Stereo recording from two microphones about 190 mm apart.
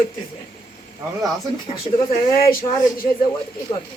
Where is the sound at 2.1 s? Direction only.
50° left (ahead or behind).